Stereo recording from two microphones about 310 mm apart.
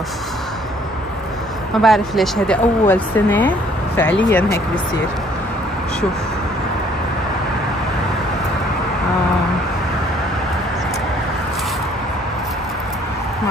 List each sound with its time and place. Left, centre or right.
1.8 s speech: centre